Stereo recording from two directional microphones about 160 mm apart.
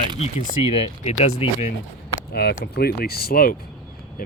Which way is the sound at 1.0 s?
50° left (ahead or behind).